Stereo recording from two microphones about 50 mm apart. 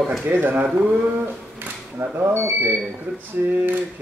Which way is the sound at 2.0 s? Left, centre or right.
Right.